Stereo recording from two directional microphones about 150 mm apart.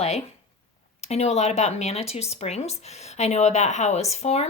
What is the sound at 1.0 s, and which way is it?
A woman's voice, 45° left (ahead or behind).